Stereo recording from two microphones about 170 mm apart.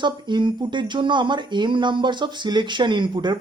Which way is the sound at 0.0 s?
25° right (ahead or behind).